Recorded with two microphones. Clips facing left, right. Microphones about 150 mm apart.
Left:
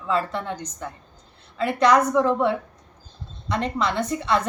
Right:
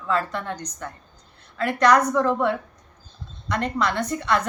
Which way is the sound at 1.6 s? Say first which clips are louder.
Even; 25° left (ahead or behind).